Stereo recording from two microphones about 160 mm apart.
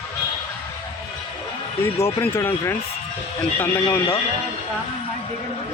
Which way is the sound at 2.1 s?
15° left (ahead or behind).